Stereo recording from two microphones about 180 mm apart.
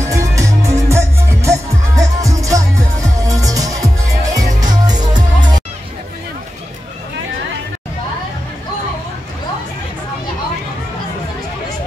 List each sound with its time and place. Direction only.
0.0 s music: 15° right (ahead or behind)